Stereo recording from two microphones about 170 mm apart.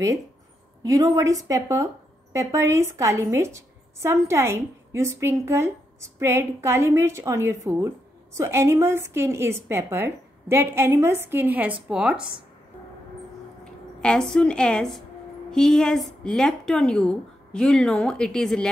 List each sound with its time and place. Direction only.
0.8 s a woman's voice: 20° right (ahead or behind)
12.2 s speech: 30° right (ahead or behind)
14.0 s a woman's voice: 5° left (ahead or behind)